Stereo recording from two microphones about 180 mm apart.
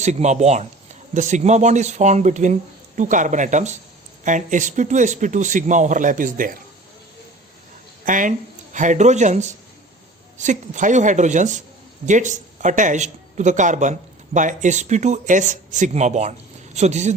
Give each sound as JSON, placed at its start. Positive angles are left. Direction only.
{"t": 0.0, "sound": "speech", "side_deg": -40}
{"t": 8.0, "sound": "speech", "side_deg": -45}